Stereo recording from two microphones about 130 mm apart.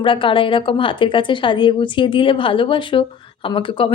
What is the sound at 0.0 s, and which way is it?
A woman's voice, 40° left (ahead or behind).